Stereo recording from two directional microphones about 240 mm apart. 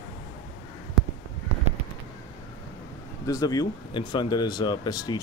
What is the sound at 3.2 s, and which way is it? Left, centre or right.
Speech, centre.